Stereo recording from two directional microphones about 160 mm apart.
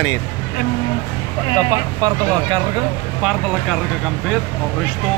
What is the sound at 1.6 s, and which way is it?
Speech, 25° right (ahead or behind).